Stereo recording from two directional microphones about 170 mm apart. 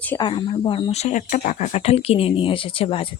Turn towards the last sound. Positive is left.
turn(degrees=35)  # may be behind; listen again after turning